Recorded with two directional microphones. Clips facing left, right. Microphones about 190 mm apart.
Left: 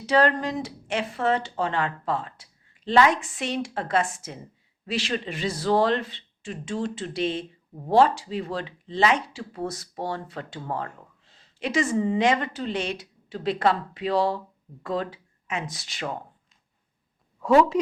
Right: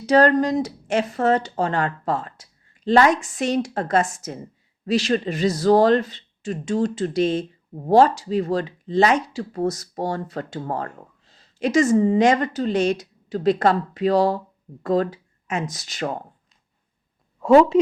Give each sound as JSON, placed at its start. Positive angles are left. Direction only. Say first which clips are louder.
{"t": 0.0, "sound": "speech", "louder": "right 6 dB", "side_deg": -40}
{"t": 17.4, "sound": "a woman's voice", "louder": "right 5 dB", "side_deg": -25}